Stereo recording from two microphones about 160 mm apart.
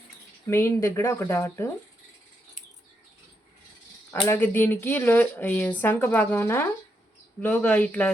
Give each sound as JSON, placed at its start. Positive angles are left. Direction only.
{"t": 0.4, "sound": "speech", "side_deg": 15}
{"t": 4.3, "sound": "speech", "side_deg": 10}